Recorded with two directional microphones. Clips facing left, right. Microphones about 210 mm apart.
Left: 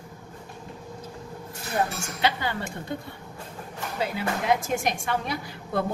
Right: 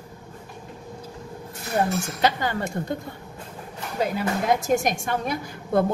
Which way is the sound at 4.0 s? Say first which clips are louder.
Right 4 dB; 45° right (ahead or behind).